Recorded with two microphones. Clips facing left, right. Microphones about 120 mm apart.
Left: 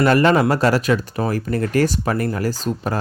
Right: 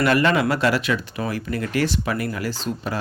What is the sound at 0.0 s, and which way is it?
Speech, 35° left (ahead or behind).